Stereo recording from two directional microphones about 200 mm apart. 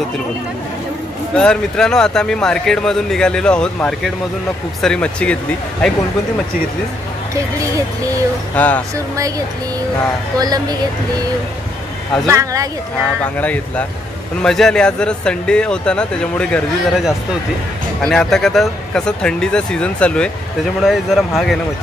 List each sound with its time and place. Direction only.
1.3 s speech: 5° left (ahead or behind)
8.5 s speech: 10° left (ahead or behind)
10.4 s speech: 20° right (ahead or behind)
12.3 s speech: 15° right (ahead or behind)
13.2 s speech: 5° left (ahead or behind)